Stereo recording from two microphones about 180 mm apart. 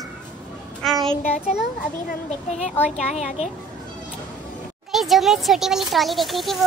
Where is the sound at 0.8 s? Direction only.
Centre (ahead or behind).